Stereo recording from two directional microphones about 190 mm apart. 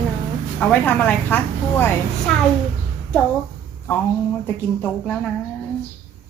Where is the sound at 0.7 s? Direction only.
10° left (ahead or behind).